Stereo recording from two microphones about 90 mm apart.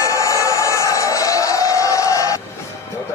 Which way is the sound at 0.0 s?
35° left (ahead or behind).